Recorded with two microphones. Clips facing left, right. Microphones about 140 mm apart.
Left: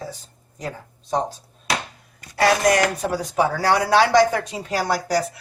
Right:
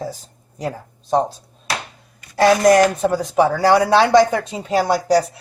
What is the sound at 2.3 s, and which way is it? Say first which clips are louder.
Speech: right 5 dB; 25° right (ahead or behind).